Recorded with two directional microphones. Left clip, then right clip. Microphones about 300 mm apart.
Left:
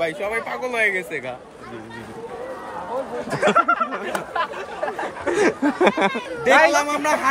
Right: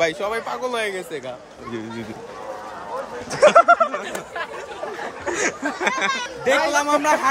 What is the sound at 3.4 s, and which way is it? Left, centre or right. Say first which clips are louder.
Speech: right 5 dB; centre.